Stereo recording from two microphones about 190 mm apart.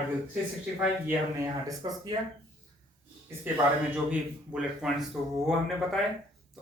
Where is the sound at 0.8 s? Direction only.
10° right (ahead or behind).